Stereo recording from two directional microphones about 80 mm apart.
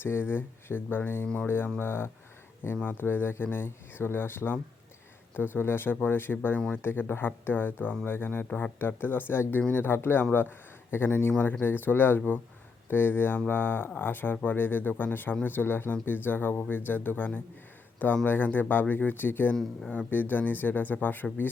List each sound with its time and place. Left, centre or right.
0.0 s speech: left